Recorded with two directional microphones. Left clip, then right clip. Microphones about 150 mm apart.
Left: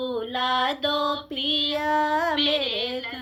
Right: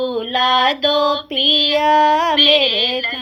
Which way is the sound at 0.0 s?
35° right (ahead or behind).